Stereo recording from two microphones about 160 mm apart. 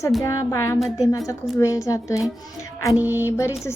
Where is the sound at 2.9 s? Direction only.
15° right (ahead or behind).